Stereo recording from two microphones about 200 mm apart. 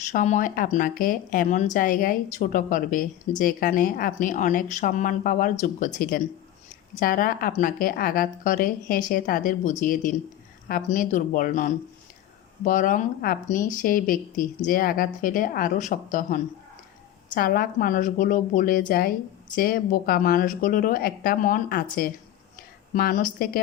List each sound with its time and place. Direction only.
0.1 s a woman's voice: 40° left (ahead or behind)